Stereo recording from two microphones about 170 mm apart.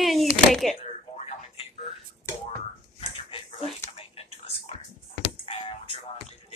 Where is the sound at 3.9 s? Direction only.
35° left (ahead or behind).